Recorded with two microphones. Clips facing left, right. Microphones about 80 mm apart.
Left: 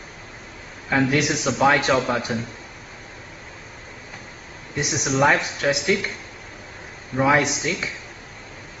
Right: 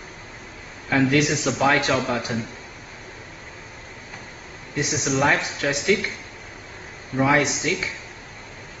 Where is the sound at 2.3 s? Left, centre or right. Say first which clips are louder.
Left 1 dB; left.